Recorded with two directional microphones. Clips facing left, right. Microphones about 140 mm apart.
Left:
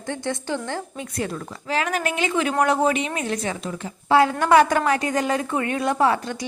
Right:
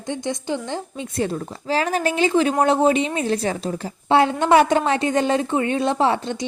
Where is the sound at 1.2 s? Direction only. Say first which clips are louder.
Right 5 dB; 30° right (ahead or behind).